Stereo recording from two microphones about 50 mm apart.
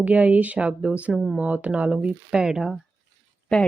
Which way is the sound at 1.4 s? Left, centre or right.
Right.